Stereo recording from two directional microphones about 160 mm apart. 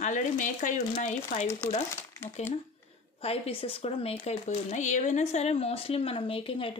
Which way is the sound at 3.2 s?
35° left (ahead or behind).